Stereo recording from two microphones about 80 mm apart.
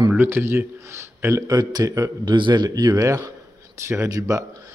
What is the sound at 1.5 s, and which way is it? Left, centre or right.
Speech, right.